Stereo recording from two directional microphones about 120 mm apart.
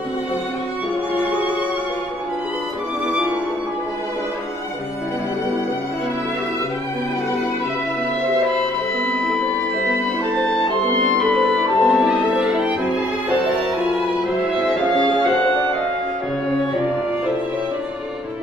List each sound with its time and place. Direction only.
8.5 s music: 5° left (ahead or behind)
12.1 s music: 5° right (ahead or behind)